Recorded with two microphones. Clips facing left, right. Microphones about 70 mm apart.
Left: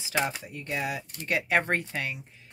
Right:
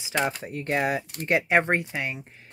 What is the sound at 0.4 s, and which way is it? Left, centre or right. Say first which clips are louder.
Speech: right 7 dB; right.